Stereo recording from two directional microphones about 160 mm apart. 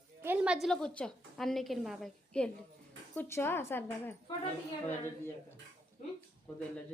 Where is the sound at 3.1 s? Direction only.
15° left (ahead or behind).